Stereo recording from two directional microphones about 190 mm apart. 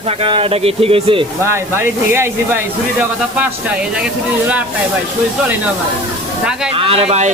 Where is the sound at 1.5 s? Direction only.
15° right (ahead or behind).